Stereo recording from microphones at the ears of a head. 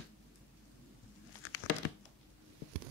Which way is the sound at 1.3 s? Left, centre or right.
Left.